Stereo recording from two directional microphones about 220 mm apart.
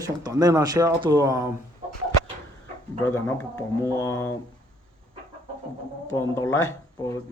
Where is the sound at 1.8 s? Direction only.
25° right (ahead or behind).